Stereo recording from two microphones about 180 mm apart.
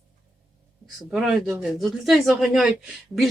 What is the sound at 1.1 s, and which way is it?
Speech, 5° right (ahead or behind).